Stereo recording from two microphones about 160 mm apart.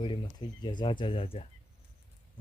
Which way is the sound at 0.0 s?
30° left (ahead or behind).